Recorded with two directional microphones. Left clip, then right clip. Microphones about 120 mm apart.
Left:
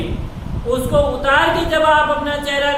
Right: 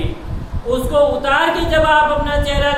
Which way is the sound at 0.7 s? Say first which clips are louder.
Right 2 dB; 10° right (ahead or behind).